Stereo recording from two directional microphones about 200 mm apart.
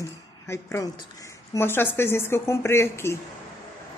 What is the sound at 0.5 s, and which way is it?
Speech, 15° left (ahead or behind).